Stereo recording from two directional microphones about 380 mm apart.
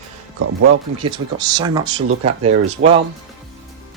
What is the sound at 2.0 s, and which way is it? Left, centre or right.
Speech, right.